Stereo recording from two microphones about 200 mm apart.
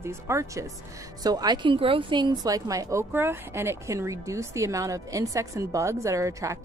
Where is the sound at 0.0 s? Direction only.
15° right (ahead or behind).